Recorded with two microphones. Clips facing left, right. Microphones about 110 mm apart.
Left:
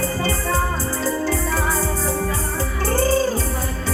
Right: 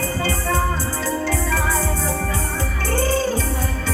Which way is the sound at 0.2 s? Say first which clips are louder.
Even; 35° left (ahead or behind).